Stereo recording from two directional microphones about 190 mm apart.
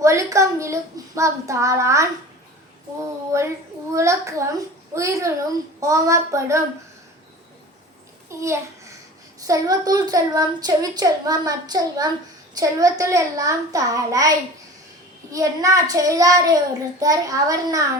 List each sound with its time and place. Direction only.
0.0 s a child's voice: 15° right (ahead or behind)
3.3 s a child's voice: 15° right (ahead or behind)
8.3 s a child's voice: 15° right (ahead or behind)